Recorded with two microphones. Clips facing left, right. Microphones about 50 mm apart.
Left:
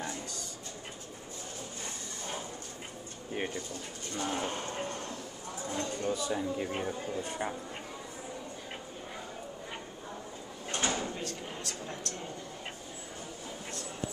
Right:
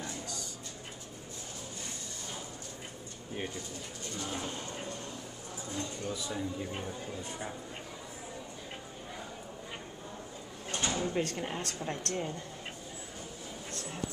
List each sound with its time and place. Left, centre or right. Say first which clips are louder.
4.2 s a sound: left 5 dB; left
5.7 s speech: left 5 dB; left
6.3 s speech: left 4 dB; left
10.7 s drawer open or close: left 1 dB; left
11.1 s a woman's voice: right 6 dB; right